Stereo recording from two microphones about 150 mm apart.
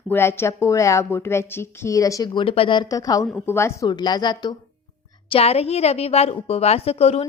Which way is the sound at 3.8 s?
30° left (ahead or behind).